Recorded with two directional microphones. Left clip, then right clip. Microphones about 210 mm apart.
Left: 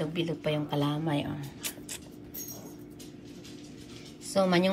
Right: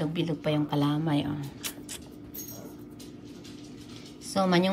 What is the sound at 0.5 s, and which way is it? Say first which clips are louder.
A woman's voice: right 3 dB; 5° right (ahead or behind).